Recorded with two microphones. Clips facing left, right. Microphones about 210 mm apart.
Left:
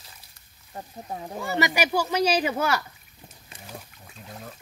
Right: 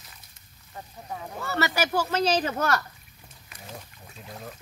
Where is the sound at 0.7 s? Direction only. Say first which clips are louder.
Left 3 dB; 35° left (ahead or behind).